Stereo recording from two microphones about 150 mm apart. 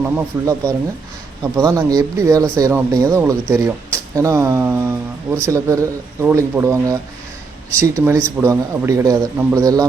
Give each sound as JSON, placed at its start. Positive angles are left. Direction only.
{"t": 0.0, "sound": "speech", "side_deg": -15}